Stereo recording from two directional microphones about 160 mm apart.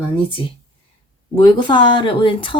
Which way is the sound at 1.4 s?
30° left (ahead or behind).